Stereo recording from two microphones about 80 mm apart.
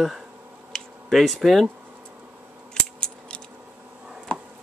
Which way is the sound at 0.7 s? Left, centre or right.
Centre.